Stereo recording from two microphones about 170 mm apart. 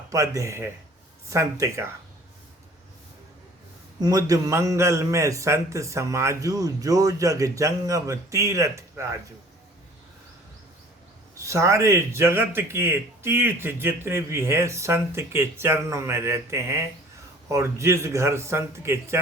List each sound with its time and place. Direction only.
0.1 s speech: 20° right (ahead or behind)
4.0 s a man's voice: 20° right (ahead or behind)
11.3 s speech: 20° right (ahead or behind)